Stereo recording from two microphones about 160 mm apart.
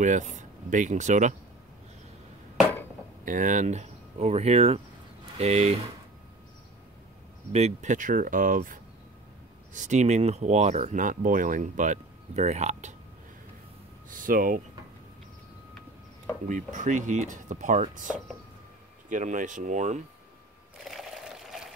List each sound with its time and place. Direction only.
0.0 s speech: 50° right (ahead or behind)
3.3 s speech: 55° right (ahead or behind)
7.5 s speech: 45° right (ahead or behind)
14.1 s speech: 60° right (ahead or behind)
16.4 s speech: 55° right (ahead or behind)
20.8 s sewing machine: centre (ahead or behind)